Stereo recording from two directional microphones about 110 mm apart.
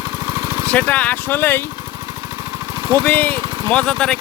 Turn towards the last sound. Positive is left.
turn(degrees=10)  # may be behind; listen again after turning